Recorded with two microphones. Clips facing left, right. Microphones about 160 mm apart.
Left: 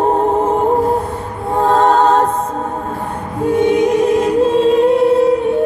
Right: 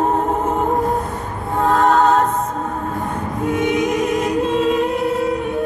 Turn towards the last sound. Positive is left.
turn(degrees=30)  # may be behind; listen again after turning